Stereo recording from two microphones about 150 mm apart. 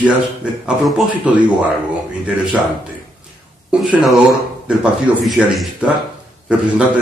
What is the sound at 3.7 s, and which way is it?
A man's voice, 5° right (ahead or behind).